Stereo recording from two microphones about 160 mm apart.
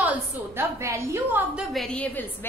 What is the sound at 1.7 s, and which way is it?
Speech, 5° left (ahead or behind).